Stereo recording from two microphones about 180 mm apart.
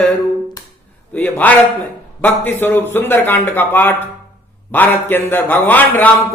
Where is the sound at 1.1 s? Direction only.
10° left (ahead or behind).